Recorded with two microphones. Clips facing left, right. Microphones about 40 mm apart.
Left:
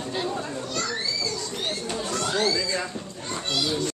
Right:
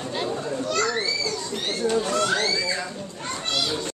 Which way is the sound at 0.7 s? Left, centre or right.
Right.